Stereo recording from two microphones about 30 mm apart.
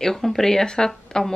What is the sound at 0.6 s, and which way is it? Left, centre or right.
Speech, left.